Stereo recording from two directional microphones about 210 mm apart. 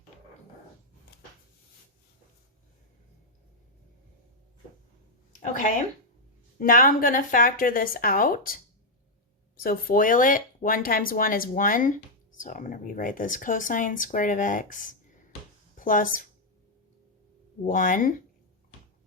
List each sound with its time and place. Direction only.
5.4 s speech: 35° left (ahead or behind)
9.6 s speech: 40° left (ahead or behind)
15.8 s speech: 40° left (ahead or behind)
17.7 s speech: 40° left (ahead or behind)